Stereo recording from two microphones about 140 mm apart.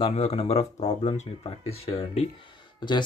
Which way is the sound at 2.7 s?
30° left (ahead or behind).